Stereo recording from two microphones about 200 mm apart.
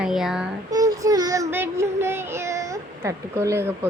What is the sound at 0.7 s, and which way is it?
A child's voice, 15° right (ahead or behind).